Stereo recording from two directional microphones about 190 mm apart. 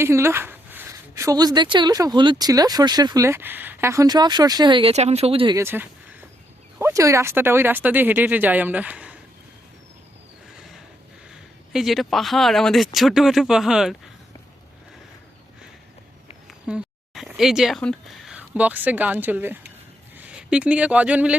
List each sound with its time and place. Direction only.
0.0 s speech: 15° right (ahead or behind)
5.5 s speech: 10° right (ahead or behind)
11.7 s speech: centre (ahead or behind)
16.5 s speech: 5° right (ahead or behind)